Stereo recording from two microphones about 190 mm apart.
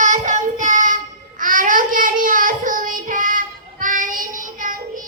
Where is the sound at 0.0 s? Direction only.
40° right (ahead or behind).